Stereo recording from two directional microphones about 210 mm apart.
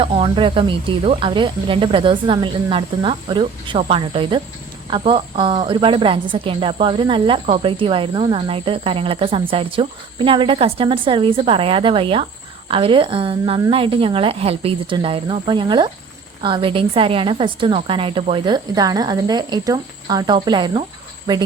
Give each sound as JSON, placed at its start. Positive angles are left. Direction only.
{"t": 0.0, "sound": "a woman's voice", "side_deg": -25}